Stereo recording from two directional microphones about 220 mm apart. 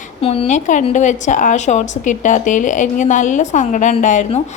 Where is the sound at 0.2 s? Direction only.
25° left (ahead or behind).